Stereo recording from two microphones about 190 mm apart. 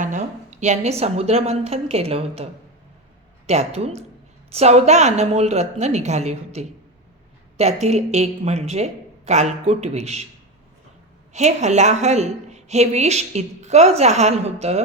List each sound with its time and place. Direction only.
0.0 s a woman's voice: 40° right (ahead or behind)
11.3 s a woman's voice: 35° right (ahead or behind)